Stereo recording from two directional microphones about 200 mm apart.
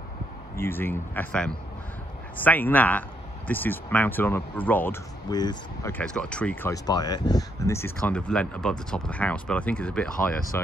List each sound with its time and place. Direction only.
0.6 s speech: 10° left (ahead or behind)
5.3 s speech: 20° left (ahead or behind)
5.9 s speech: 5° left (ahead or behind)